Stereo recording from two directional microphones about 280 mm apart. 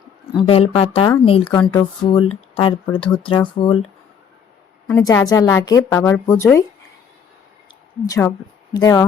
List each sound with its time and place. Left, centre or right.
0.4 s a woman's voice: left
4.9 s a woman's voice: centre
8.0 s a woman's voice: centre